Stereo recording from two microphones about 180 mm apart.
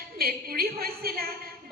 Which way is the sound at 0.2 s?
55° right (ahead or behind).